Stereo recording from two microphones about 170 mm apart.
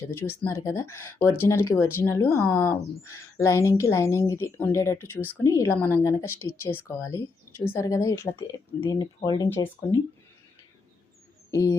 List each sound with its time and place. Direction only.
0.1 s speech: 15° left (ahead or behind)
11.5 s speech: 20° left (ahead or behind)